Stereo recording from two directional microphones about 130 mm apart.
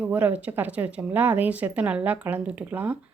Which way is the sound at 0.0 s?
10° right (ahead or behind).